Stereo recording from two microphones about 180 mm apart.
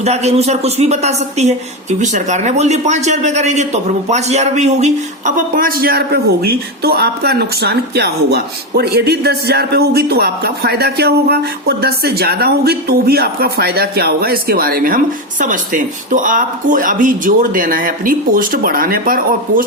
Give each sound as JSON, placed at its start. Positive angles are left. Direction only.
{"t": 0.0, "sound": "a woman's voice", "side_deg": -35}